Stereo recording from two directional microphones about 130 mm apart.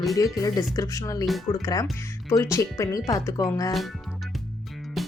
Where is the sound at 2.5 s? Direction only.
25° left (ahead or behind).